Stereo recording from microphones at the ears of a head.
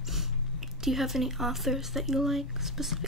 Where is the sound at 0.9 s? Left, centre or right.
Centre.